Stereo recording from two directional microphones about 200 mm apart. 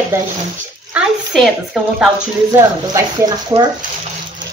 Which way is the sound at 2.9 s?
20° right (ahead or behind).